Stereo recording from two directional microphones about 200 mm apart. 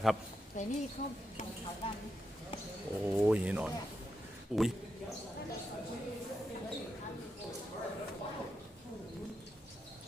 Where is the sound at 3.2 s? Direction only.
10° right (ahead or behind).